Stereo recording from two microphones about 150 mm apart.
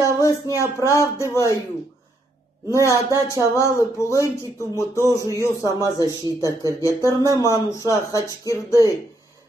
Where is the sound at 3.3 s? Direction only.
20° left (ahead or behind).